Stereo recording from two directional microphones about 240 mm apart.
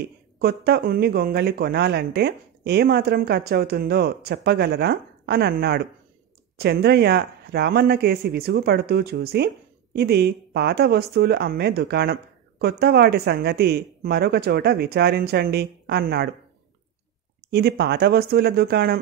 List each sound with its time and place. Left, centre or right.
0.4 s a woman's voice: right
17.5 s a woman's voice: right